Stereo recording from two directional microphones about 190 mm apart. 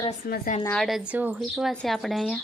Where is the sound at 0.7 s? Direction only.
Centre (ahead or behind).